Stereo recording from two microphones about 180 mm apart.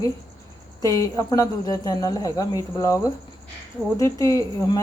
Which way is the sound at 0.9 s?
20° left (ahead or behind).